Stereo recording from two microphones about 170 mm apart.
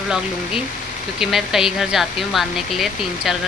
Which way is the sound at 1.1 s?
Centre (ahead or behind).